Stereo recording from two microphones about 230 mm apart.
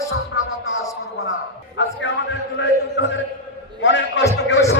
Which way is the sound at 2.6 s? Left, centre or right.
Left.